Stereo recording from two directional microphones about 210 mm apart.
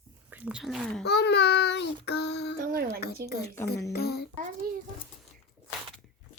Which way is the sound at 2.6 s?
45° right (ahead or behind).